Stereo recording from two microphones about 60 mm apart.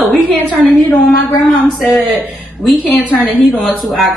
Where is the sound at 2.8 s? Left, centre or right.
Left.